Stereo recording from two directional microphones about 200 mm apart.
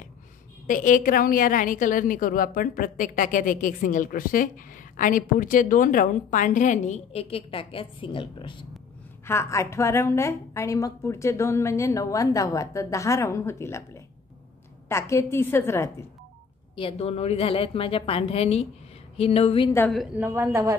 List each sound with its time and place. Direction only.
0.7 s a woman's voice: 40° left (ahead or behind); by 8.6 s 25° left (ahead or behind)
9.2 s a woman's voice: 10° left (ahead or behind)
16.7 s a woman's voice: 30° left (ahead or behind)
20.2 s speech: 10° right (ahead or behind)